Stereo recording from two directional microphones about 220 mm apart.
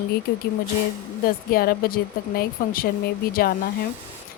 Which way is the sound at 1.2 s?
40° left (ahead or behind).